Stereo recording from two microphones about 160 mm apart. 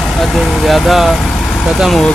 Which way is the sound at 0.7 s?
Centre (ahead or behind).